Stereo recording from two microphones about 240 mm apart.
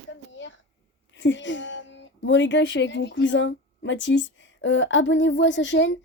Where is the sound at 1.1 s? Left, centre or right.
Left.